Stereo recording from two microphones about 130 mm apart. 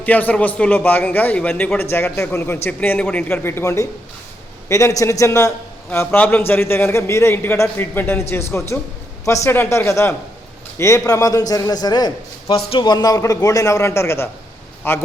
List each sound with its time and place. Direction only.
0.0 s a man's voice: 10° left (ahead or behind)